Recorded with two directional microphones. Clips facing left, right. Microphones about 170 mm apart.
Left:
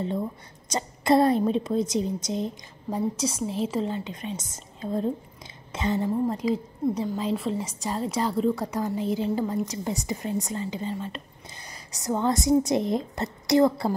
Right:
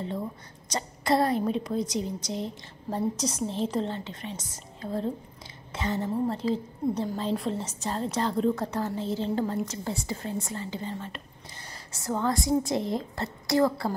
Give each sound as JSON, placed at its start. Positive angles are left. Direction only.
{"t": 0.7, "sound": "a woman's voice", "side_deg": 20}
{"t": 3.2, "sound": "a woman's voice", "side_deg": 5}